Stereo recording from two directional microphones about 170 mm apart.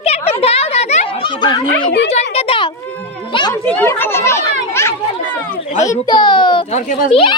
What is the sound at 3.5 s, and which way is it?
Chatter, 10° left (ahead or behind).